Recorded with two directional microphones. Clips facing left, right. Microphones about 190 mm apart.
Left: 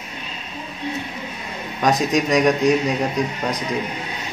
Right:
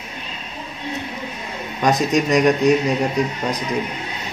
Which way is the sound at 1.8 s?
Centre (ahead or behind).